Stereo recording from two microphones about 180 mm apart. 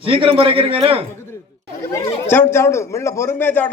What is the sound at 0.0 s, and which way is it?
Speech, 30° right (ahead or behind).